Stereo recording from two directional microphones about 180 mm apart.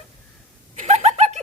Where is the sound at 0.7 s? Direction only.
40° right (ahead or behind).